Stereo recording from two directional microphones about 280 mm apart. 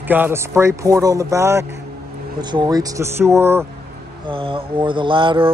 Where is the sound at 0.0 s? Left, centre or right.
Centre.